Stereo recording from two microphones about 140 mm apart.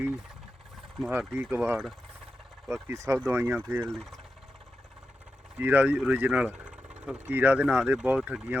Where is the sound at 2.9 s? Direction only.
20° right (ahead or behind).